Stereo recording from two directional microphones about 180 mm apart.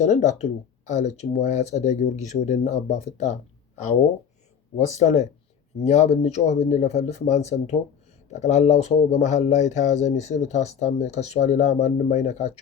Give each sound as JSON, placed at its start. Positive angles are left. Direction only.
{"t": 0.0, "sound": "speech", "side_deg": 40}
{"t": 4.9, "sound": "speech", "side_deg": 40}